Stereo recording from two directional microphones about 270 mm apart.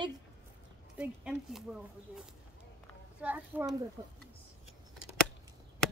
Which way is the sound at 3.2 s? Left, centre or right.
Centre.